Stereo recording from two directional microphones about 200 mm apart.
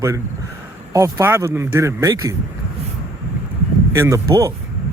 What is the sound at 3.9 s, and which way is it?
Speech, 15° right (ahead or behind).